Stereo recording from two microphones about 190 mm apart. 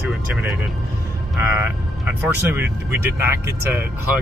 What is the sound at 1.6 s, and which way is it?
Speech, 10° right (ahead or behind).